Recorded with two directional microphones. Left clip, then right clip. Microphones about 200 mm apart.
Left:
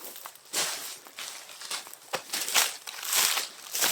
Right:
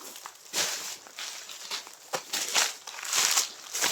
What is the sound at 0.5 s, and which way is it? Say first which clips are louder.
Walk: right 1 dB; 20° left (ahead or behind).